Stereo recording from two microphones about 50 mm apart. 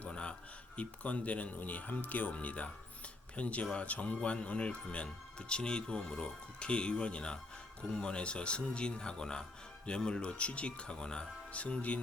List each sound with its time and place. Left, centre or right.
0.1 s a sound: left
0.8 s speech: left
11.5 s speech: left